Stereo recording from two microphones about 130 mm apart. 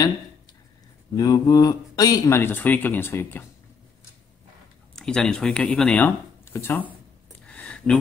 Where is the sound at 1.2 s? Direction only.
30° left (ahead or behind).